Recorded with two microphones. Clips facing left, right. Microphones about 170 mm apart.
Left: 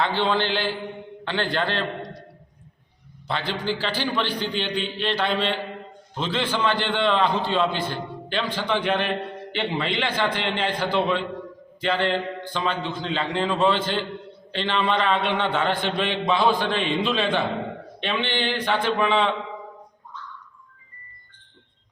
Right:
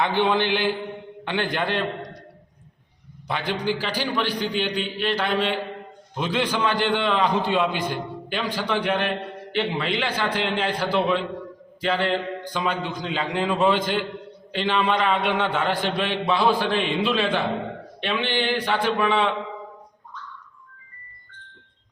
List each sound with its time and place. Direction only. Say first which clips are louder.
0.0 s a man's voice: right 2 dB; 15° right (ahead or behind)
3.2 s a man's voice: right 1 dB; 15° right (ahead or behind)